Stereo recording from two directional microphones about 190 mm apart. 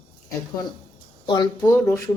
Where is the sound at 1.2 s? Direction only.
25° left (ahead or behind).